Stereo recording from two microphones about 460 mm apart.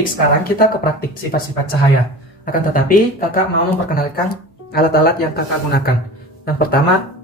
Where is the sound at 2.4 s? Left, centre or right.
Centre.